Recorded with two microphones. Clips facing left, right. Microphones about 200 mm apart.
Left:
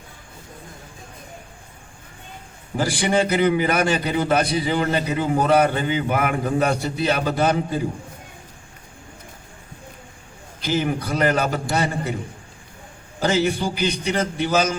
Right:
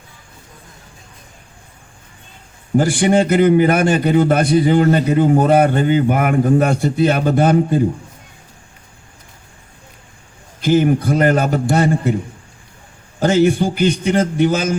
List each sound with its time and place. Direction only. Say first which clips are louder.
2.7 s a man's voice: right 7 dB; 50° right (ahead or behind)
10.6 s a man's voice: right 9 dB; 50° right (ahead or behind)
13.1 s a man's voice: right 7 dB; 50° right (ahead or behind)